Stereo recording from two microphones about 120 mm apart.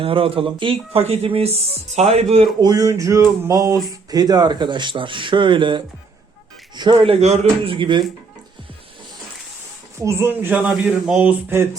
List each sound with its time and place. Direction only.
0.0 s speech: 50° right (ahead or behind)
2.6 s speech: 35° right (ahead or behind); by 7.3 s 60° right (ahead or behind)
7.6 s speech: 45° right (ahead or behind)
10.0 s speech: 20° right (ahead or behind)